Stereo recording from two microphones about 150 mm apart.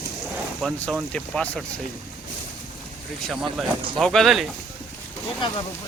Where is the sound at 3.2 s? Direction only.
Centre (ahead or behind).